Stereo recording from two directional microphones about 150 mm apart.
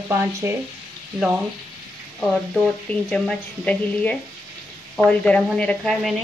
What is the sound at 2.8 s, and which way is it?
A woman's voice, 5° left (ahead or behind).